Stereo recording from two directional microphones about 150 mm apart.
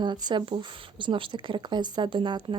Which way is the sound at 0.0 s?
30° right (ahead or behind).